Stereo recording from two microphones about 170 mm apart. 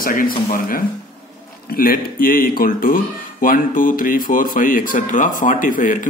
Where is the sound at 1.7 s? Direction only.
60° left (ahead or behind).